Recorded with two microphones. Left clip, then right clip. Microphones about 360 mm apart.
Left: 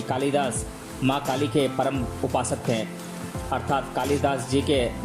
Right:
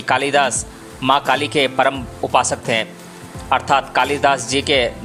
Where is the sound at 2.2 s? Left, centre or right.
Right.